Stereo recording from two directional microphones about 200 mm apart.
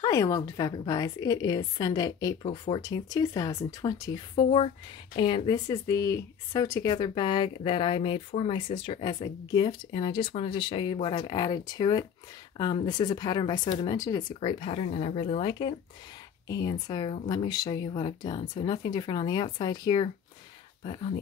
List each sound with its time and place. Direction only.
0.0 s speech: 15° left (ahead or behind)